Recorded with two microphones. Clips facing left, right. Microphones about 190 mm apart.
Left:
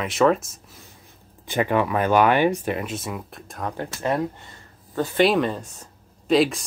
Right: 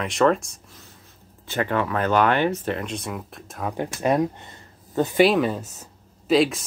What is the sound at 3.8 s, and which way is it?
Speech, 15° right (ahead or behind).